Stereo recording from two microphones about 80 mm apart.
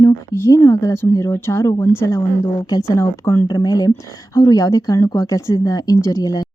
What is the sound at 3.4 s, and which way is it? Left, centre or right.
Speech, left.